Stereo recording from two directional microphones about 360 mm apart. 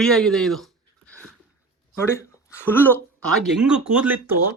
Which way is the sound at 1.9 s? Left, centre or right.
Centre.